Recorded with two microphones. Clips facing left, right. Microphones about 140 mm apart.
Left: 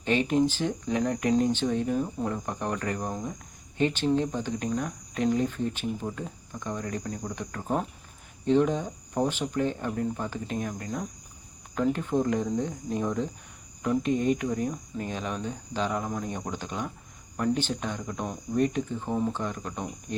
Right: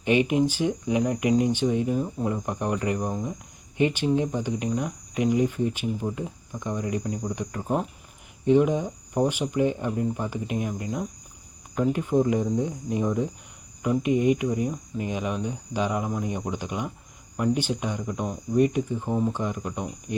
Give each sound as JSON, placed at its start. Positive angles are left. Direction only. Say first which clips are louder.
{"t": 0.0, "sound": "speech", "louder": "right 3 dB", "side_deg": -15}